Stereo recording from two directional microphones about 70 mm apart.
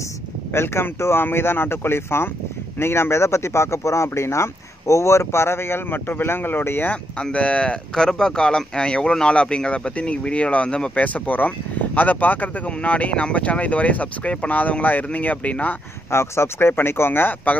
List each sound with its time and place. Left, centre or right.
0.5 s speech: left
7.2 s speech: centre
16.1 s speech: left